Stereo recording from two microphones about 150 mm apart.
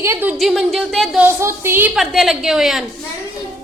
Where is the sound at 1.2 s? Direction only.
15° right (ahead or behind).